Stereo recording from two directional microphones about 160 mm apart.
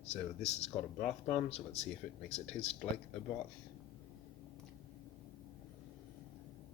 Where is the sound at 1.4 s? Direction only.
40° left (ahead or behind).